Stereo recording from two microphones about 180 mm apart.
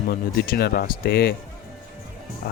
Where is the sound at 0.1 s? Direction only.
60° left (ahead or behind).